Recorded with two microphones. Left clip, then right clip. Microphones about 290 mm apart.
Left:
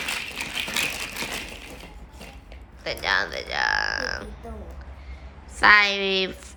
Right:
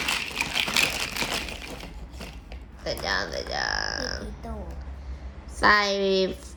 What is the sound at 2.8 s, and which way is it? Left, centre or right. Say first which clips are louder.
A woman's voice: left 4 dB; centre.